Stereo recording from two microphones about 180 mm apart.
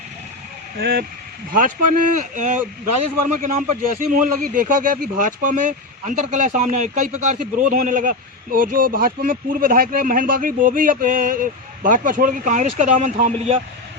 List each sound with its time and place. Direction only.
0.8 s speech: 60° right (ahead or behind)
1.5 s speech: 45° right (ahead or behind)